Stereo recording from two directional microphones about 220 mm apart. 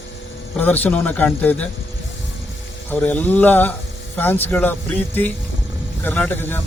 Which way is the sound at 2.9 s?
5° left (ahead or behind).